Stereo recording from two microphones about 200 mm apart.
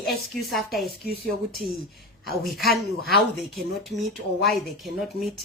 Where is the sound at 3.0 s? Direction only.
50° left (ahead or behind).